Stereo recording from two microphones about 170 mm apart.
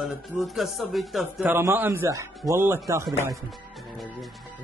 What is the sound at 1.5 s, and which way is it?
A man's voice, 15° right (ahead or behind).